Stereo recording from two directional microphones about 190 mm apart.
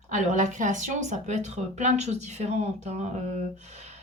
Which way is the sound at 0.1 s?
40° right (ahead or behind).